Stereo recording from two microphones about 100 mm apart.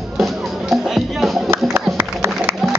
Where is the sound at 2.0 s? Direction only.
25° right (ahead or behind).